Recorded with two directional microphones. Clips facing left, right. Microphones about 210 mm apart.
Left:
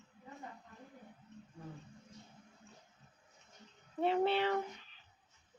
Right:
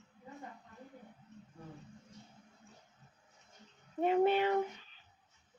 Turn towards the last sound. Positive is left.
turn(degrees=-15)  # may be behind; listen again after turning